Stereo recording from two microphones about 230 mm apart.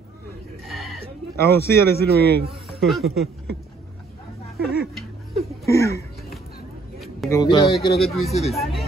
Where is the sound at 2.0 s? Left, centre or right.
Right.